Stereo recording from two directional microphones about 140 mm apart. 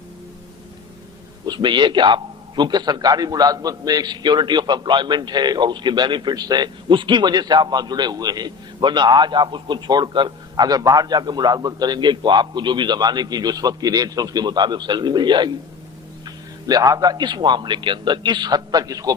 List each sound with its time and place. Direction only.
1.5 s a man's voice: 35° right (ahead or behind)